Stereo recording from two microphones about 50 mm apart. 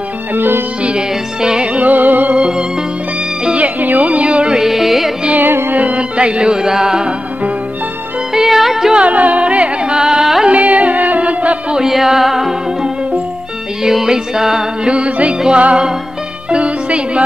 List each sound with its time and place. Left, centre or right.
0.3 s music: right
0.8 s music: centre
1.9 s music: right
2.3 s music: centre
3.5 s music: right
4.6 s music: centre
5.3 s music: right
5.7 s music: right; by 7.2 s centre
8.3 s music: centre
9.0 s music: right; by 10.5 s centre
10.5 s music: right
11.7 s music: centre
14.9 s music: right